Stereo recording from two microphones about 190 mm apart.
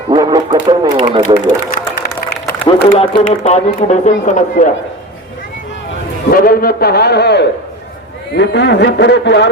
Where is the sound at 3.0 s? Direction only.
30° left (ahead or behind).